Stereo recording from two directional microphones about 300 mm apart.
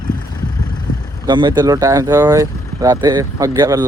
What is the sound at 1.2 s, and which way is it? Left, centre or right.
Speech, centre.